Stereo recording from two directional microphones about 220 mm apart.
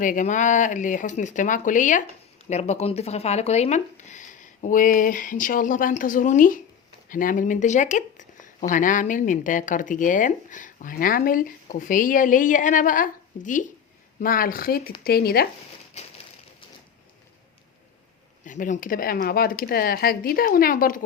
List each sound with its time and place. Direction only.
0.0 s speech: 35° left (ahead or behind)
16.0 s a sound: 30° left (ahead or behind)
18.4 s speech: 35° left (ahead or behind)